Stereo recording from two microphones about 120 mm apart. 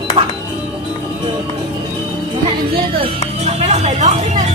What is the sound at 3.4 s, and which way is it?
Music, 70° right (ahead or behind).